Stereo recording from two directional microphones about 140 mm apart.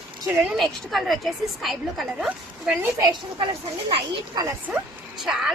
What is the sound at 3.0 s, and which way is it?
A woman's voice, 35° right (ahead or behind).